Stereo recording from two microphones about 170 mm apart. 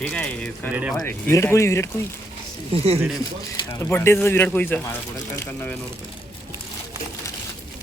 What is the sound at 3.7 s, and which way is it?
Speech, 15° left (ahead or behind).